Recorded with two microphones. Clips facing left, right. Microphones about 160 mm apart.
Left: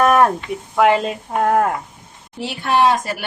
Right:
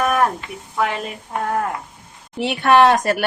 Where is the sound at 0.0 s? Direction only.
90° left.